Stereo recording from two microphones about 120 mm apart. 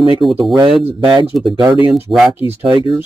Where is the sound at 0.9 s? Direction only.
45° right (ahead or behind).